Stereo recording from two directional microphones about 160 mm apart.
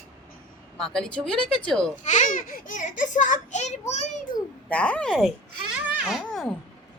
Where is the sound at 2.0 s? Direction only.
50° left (ahead or behind).